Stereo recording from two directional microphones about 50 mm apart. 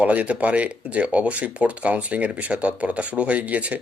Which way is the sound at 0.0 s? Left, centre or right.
Right.